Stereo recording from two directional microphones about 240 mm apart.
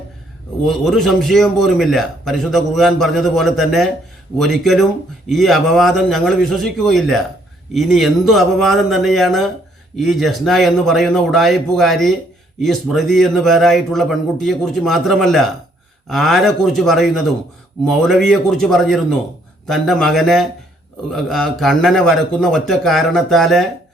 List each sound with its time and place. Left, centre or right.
0.6 s a man's voice: centre